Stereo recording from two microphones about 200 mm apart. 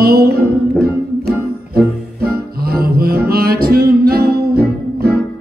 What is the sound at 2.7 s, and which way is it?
Music, 50° right (ahead or behind).